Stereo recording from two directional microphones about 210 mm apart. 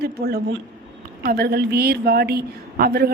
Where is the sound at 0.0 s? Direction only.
50° right (ahead or behind).